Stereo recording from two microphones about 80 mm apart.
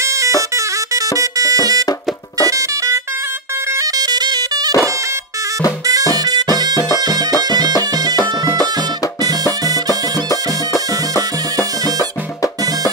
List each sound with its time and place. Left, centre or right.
0.0 s music: right
5.9 s music: right